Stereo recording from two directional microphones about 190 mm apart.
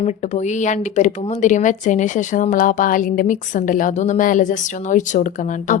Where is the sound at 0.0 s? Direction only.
35° left (ahead or behind).